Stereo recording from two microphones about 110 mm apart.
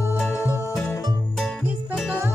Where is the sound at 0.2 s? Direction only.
25° left (ahead or behind).